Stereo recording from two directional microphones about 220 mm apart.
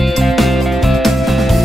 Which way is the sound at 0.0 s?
Centre (ahead or behind).